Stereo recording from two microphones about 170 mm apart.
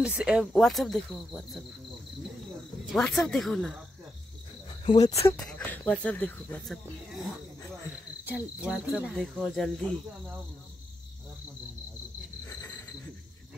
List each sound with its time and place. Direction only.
0.0 s speech: 5° right (ahead or behind)
2.9 s speech: centre (ahead or behind)
4.8 s speech: 20° left (ahead or behind)
5.5 s speech: 10° left (ahead or behind)
8.3 s speech: 10° right (ahead or behind)
12.4 s cricket: 15° left (ahead or behind)